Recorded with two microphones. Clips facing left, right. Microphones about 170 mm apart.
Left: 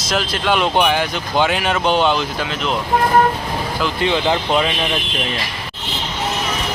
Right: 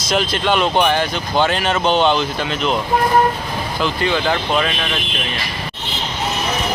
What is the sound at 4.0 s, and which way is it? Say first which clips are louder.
Speech: left 2 dB; 20° left (ahead or behind).